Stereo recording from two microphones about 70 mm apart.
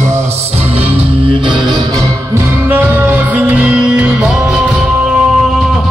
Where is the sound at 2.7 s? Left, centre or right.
Right; by 4.6 s centre.